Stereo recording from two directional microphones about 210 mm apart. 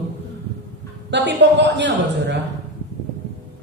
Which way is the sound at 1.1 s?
55° right (ahead or behind).